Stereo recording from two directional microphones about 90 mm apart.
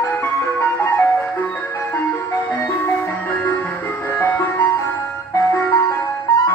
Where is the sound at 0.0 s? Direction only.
25° left (ahead or behind).